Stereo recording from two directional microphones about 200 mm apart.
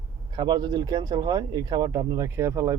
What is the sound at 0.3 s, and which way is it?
Speech, 20° right (ahead or behind).